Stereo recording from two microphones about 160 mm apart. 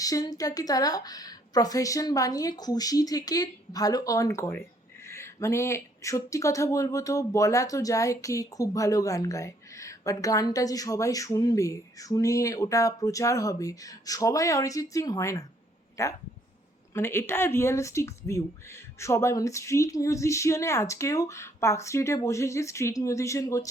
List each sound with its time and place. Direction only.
0.0 s speech: 20° left (ahead or behind)